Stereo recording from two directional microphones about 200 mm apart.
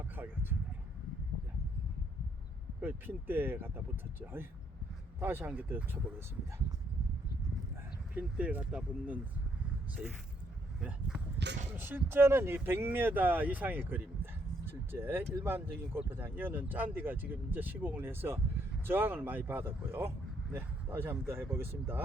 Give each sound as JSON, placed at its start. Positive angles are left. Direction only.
{"t": 0.0, "sound": "a sound", "side_deg": -10}
{"t": 2.8, "sound": "speech", "side_deg": -10}
{"t": 5.2, "sound": "speech", "side_deg": -10}
{"t": 8.1, "sound": "speech", "side_deg": -10}
{"t": 11.5, "sound": "speech", "side_deg": -60}
{"t": 11.8, "sound": "speech", "side_deg": -10}